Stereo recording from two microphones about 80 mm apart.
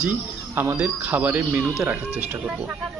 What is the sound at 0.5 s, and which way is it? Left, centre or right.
Speech, right.